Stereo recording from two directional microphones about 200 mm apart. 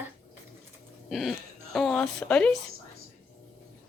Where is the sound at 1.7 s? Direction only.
5° left (ahead or behind).